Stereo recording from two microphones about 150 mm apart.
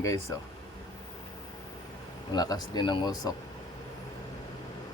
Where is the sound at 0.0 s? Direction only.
20° left (ahead or behind).